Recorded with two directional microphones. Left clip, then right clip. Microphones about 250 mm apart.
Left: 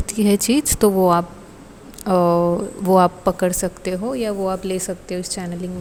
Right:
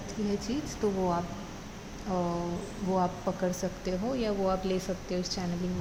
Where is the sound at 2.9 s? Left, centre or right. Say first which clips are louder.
Left 15 dB; left.